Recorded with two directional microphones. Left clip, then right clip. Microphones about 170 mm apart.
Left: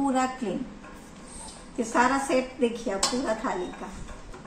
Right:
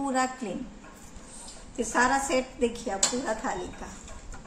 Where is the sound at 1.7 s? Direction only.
25° right (ahead or behind).